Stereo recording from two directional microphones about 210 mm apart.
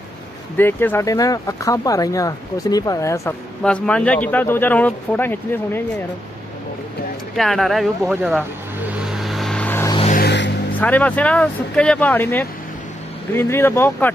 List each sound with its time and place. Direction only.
0.6 s speech: 10° left (ahead or behind)
7.3 s vehicle: centre (ahead or behind)
10.1 s music: 55° left (ahead or behind)
10.8 s speech: 5° left (ahead or behind)